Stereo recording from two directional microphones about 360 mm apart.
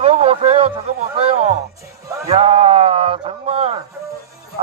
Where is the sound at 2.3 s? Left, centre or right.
Centre.